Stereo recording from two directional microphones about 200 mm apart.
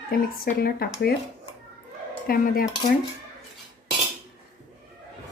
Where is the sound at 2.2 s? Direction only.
45° left (ahead or behind).